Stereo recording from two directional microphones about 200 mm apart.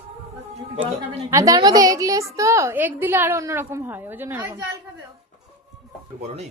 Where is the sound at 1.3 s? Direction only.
15° right (ahead or behind).